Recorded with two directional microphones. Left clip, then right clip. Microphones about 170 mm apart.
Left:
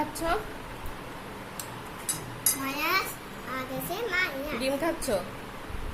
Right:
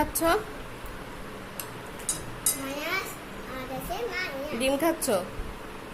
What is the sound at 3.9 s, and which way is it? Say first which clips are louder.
Children playing: left 4 dB; 45° left (ahead or behind).